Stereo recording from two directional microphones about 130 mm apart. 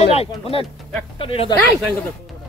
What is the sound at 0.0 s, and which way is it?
Speech, 50° left (ahead or behind).